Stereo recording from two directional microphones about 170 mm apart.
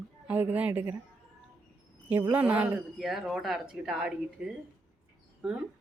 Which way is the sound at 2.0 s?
10° right (ahead or behind).